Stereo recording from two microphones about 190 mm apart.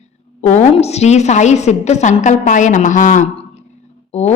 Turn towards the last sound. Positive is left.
turn(degrees=35)  # may be behind; listen again after turning